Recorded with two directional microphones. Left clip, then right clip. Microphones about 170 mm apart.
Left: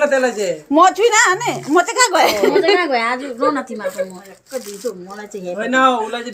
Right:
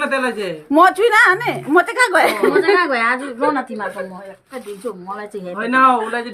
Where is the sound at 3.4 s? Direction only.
15° right (ahead or behind).